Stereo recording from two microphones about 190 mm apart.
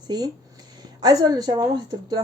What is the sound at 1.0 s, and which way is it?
Speech, 20° right (ahead or behind).